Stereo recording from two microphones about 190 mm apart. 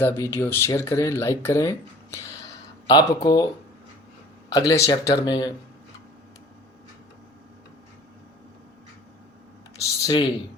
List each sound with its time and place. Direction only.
0.0 s speech: 10° left (ahead or behind)
4.4 s speech: 15° left (ahead or behind)
9.7 s computer keyboard: 20° left (ahead or behind)